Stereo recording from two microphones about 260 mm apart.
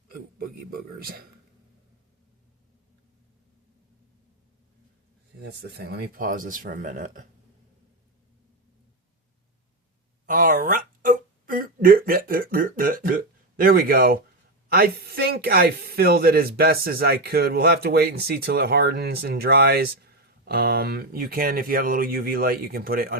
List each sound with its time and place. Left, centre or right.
0.7 s speech: right
5.4 s speech: right
10.2 s a sound: right
14.7 s speech: right